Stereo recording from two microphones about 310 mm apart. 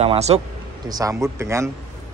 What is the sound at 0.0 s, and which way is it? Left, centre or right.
A man's voice, centre.